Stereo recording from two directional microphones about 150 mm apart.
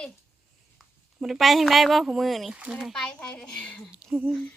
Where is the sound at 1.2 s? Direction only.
Centre (ahead or behind).